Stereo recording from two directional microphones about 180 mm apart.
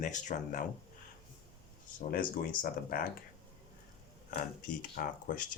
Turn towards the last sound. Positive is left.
turn(degrees=50)  # may be behind; listen again after turning